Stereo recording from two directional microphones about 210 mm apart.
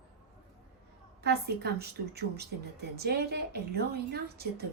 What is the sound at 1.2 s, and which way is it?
Speech, 50° right (ahead or behind).